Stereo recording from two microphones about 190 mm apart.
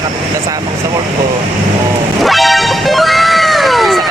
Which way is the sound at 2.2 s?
Centre (ahead or behind).